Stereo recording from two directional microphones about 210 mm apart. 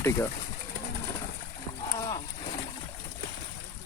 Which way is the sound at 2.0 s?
20° left (ahead or behind).